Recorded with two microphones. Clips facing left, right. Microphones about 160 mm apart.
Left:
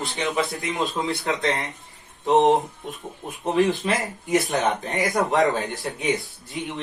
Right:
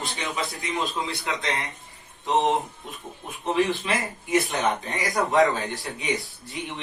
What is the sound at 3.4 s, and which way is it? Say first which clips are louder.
Speech: left 3 dB; 40° left (ahead or behind).